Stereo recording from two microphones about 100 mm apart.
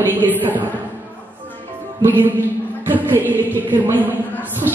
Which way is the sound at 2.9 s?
20° right (ahead or behind).